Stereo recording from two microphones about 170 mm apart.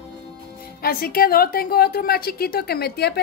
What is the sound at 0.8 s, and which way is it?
A woman's voice, 60° left (ahead or behind).